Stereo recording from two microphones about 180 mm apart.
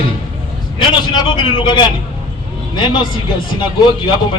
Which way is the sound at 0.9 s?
25° left (ahead or behind).